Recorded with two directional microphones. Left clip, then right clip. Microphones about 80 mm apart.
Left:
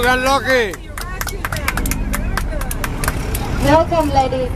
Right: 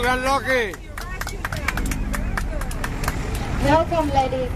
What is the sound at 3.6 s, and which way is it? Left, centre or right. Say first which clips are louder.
Speech: left 5 dB; centre.